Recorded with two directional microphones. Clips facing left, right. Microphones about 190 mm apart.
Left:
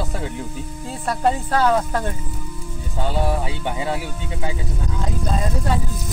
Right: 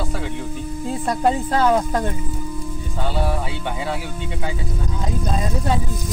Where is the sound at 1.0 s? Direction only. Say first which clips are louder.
Even; 15° right (ahead or behind).